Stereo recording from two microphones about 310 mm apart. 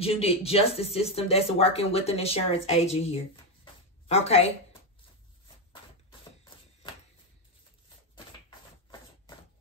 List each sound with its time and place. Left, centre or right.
0.0 s speech: centre